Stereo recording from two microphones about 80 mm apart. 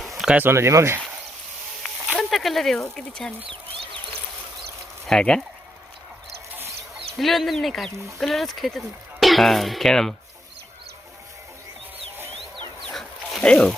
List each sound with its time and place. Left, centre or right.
0.0 s a sound: centre
0.3 s speech: right
2.1 s speech: centre
5.0 s speech: centre
7.2 s speech: centre
12.5 s chicken: right
12.9 s a sound: centre